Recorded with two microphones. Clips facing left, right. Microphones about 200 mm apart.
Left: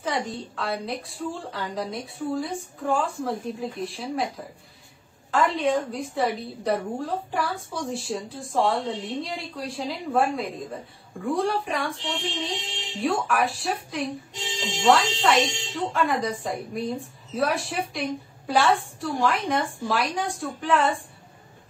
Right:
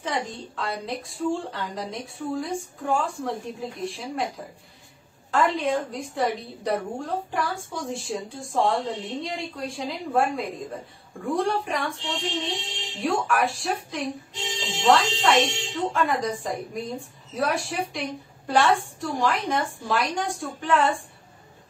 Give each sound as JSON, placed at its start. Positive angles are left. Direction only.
{"t": 0.0, "sound": "a woman's voice", "side_deg": 0}
{"t": 5.3, "sound": "a woman's voice", "side_deg": 0}